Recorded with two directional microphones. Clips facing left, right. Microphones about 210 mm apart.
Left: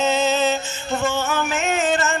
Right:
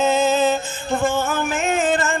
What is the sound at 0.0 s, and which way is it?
Music, 50° right (ahead or behind).